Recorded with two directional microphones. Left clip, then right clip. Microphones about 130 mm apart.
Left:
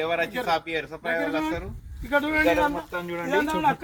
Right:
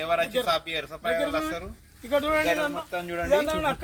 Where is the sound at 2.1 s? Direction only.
55° right (ahead or behind).